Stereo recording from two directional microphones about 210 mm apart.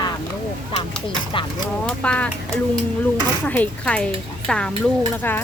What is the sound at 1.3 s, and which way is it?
Speech, 25° left (ahead or behind).